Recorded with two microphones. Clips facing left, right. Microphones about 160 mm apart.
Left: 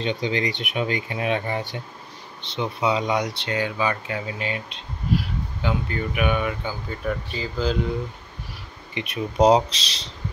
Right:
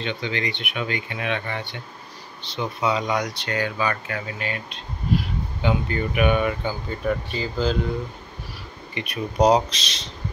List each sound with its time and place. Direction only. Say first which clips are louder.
0.0 s speech: left 3 dB; 35° left (ahead or behind)
2.4 s speech: left 1 dB; 25° left (ahead or behind)
5.6 s speech: right 3 dB; centre (ahead or behind)
8.9 s speech: left 1 dB; 25° left (ahead or behind)